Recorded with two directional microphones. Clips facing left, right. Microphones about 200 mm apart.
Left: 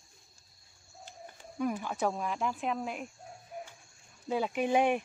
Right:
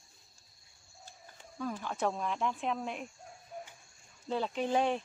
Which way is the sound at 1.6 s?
15° left (ahead or behind).